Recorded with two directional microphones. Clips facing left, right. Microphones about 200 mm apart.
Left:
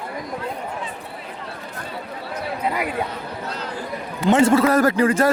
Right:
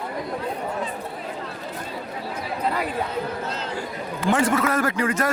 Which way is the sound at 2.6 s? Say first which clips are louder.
Left 1 dB; 10° left (ahead or behind).